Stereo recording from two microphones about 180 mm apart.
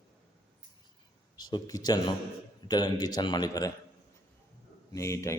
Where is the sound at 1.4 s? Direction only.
25° left (ahead or behind).